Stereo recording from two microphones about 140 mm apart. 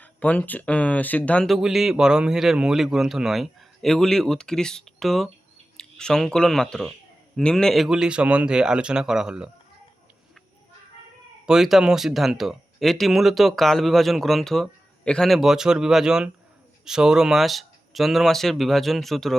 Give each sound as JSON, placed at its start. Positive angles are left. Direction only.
{"t": 0.0, "sound": "speech", "side_deg": 10}
{"t": 11.4, "sound": "speech", "side_deg": -5}